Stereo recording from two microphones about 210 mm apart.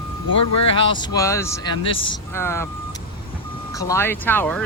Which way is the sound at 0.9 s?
20° left (ahead or behind).